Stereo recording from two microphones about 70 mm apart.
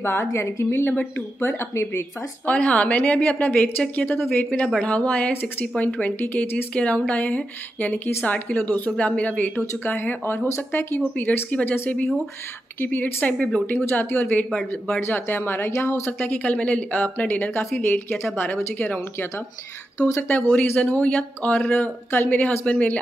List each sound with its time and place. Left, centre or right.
0.0 s speech: left
2.4 s a woman's voice: centre
5.3 s speech: left
5.8 s speech: left
11.1 s speech: left
13.7 s speech: left
16.1 s speech: left